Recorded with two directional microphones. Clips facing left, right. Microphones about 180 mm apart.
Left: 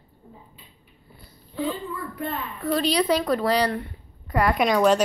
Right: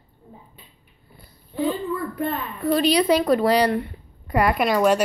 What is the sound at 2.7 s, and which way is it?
Speech, 15° right (ahead or behind).